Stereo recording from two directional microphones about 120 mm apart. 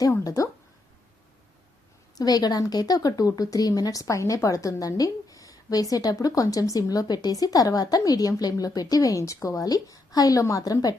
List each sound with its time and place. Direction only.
0.0 s speech: 30° left (ahead or behind)
2.1 s speech: 35° left (ahead or behind)